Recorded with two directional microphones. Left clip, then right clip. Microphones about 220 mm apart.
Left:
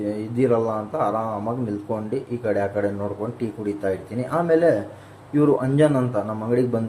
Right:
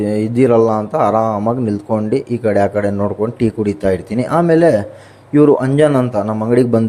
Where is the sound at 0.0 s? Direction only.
45° right (ahead or behind).